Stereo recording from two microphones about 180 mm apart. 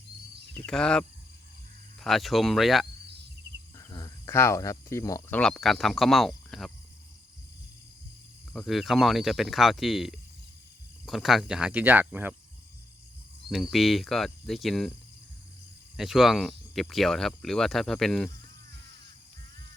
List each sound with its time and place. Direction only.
0.6 s speech: 5° left (ahead or behind)
3.8 s speech: 20° left (ahead or behind)
5.4 s speech: 5° left (ahead or behind)
8.5 s speech: centre (ahead or behind)
13.5 s speech: centre (ahead or behind)
16.0 s speech: centre (ahead or behind)